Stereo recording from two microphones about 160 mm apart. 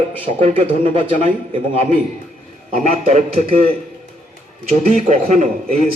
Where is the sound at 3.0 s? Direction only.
50° right (ahead or behind).